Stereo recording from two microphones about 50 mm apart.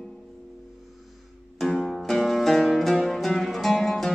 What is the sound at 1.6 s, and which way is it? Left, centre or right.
Music, centre.